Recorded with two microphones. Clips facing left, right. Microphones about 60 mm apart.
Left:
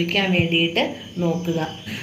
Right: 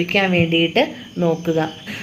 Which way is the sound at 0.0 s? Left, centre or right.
Right.